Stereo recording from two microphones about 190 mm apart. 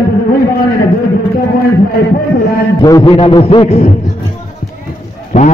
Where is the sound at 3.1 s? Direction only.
30° left (ahead or behind).